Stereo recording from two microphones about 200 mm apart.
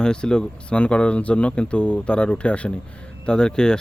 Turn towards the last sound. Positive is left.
turn(degrees=5)  # may be behind; listen again after turning